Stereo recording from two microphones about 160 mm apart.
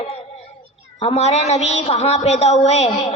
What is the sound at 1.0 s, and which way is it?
A woman's voice, 40° left (ahead or behind).